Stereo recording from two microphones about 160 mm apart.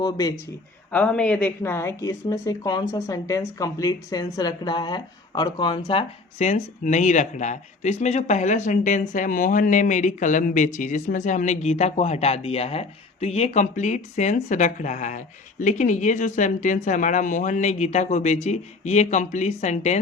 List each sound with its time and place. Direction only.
0.0 s speech: 25° left (ahead or behind)
0.9 s speech: 10° left (ahead or behind); by 6.5 s 35° left (ahead or behind)
6.5 s speech: 50° left (ahead or behind)